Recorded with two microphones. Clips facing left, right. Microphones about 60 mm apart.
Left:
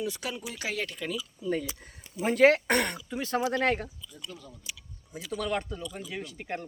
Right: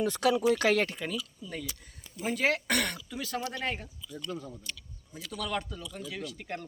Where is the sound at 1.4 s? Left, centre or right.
Left.